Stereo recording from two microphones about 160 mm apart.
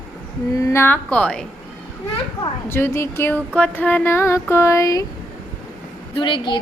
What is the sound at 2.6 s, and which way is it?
A woman's voice, 15° left (ahead or behind).